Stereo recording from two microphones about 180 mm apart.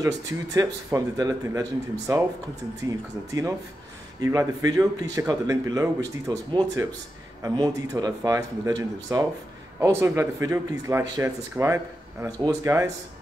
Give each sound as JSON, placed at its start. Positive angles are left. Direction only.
{"t": 0.0, "sound": "speech", "side_deg": -20}
{"t": 4.2, "sound": "speech", "side_deg": -15}